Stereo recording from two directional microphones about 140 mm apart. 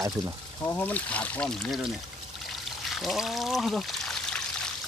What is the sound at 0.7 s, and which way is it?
Speech, 10° left (ahead or behind).